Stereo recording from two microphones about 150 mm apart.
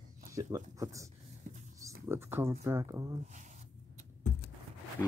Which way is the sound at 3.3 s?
55° right (ahead or behind).